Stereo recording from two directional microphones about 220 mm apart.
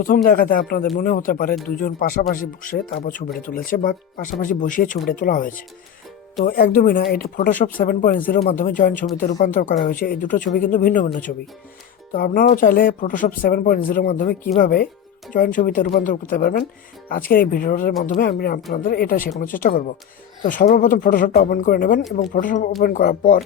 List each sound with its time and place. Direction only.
0.0 s speech: 40° left (ahead or behind)
12.1 s speech: 40° left (ahead or behind)